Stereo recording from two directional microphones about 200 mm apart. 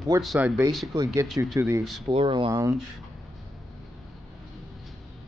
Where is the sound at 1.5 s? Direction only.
15° right (ahead or behind).